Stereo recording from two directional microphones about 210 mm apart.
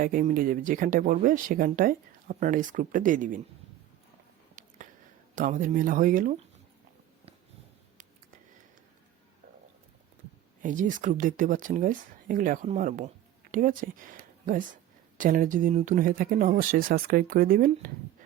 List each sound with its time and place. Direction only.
0.0 s speech: 40° right (ahead or behind)
5.3 s speech: 40° right (ahead or behind)
10.6 s speech: 40° right (ahead or behind)
15.2 s speech: 40° right (ahead or behind)